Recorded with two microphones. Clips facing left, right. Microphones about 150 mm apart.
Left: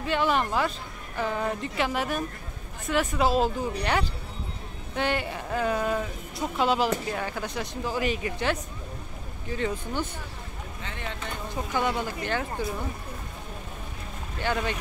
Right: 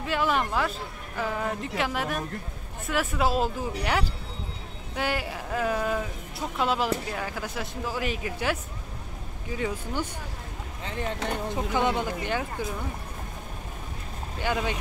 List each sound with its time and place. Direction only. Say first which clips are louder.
0.0 s speech: left 1 dB; centre (ahead or behind)
10.8 s speech: right 6 dB; 35° right (ahead or behind)
11.5 s speech: even; 20° right (ahead or behind)
14.4 s speech: even; 10° right (ahead or behind)